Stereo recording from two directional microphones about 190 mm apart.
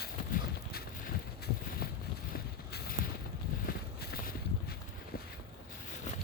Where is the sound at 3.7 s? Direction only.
55° left (ahead or behind).